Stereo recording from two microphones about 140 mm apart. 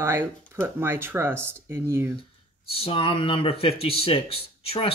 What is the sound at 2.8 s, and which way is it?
A man's voice, 40° left (ahead or behind).